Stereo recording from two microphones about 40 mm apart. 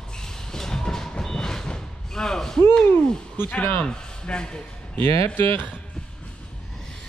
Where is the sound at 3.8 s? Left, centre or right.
Left.